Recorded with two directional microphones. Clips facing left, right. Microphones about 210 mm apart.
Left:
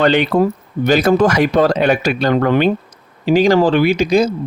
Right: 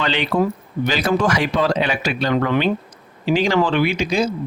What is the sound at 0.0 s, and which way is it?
Speech, 45° left (ahead or behind).